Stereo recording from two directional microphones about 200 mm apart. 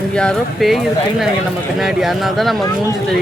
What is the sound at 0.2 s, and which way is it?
Speech, centre (ahead or behind).